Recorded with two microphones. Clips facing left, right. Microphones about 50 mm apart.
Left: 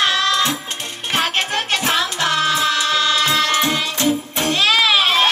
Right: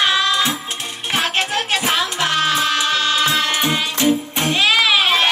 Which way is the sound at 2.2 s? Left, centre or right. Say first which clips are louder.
Even; right.